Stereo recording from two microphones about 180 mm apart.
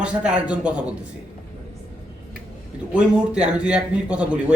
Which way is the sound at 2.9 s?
5° right (ahead or behind).